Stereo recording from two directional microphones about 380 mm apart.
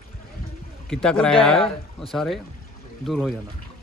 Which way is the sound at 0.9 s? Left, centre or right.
Centre.